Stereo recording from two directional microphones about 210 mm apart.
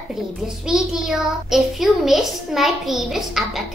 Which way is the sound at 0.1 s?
Centre (ahead or behind).